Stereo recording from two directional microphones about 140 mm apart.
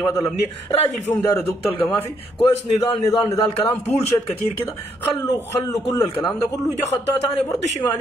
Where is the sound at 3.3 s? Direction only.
50° left (ahead or behind).